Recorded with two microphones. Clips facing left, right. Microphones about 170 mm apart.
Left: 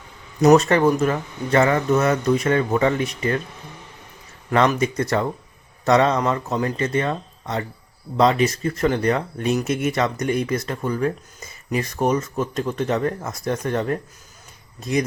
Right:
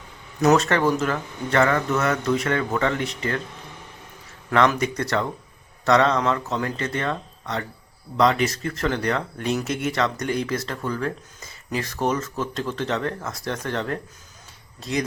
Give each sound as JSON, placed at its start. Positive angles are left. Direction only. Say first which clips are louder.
{"t": 0.4, "sound": "speech", "louder": "left 4 dB", "side_deg": 15}
{"t": 4.5, "sound": "speech", "louder": "left 2 dB", "side_deg": 20}